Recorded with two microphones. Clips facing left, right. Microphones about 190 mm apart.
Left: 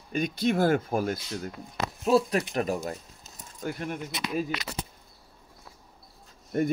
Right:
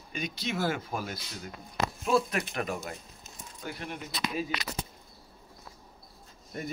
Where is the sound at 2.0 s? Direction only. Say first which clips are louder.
Left 5 dB; 35° left (ahead or behind).